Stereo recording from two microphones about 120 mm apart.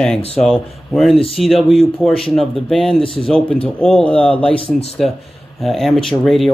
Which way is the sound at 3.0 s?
50° left (ahead or behind).